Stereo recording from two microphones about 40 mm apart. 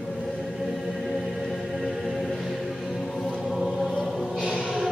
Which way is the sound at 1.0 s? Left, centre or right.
Centre.